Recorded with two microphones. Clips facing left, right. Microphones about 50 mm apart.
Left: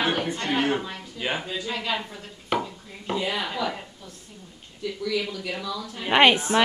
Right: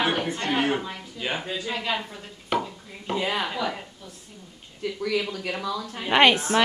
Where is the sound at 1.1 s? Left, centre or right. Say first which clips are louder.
Left 1 dB; centre.